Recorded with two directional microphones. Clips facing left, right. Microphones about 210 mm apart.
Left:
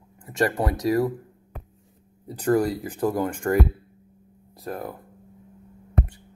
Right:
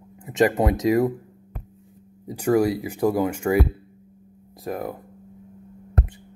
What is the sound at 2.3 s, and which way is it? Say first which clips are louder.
Speech: right 2 dB; 10° right (ahead or behind).